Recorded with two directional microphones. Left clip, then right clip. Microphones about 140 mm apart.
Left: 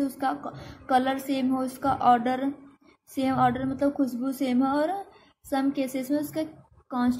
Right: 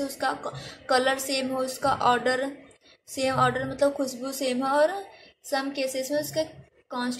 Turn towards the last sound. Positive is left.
turn(degrees=40)  # may be behind; listen again after turning